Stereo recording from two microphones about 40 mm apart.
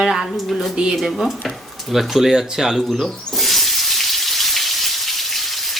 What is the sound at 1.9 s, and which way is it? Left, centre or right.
Speech, centre.